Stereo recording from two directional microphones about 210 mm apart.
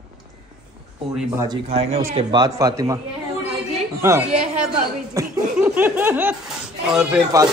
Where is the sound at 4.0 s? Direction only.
10° right (ahead or behind).